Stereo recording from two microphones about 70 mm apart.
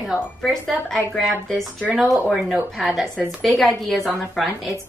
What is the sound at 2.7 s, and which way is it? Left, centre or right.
A woman's voice, centre.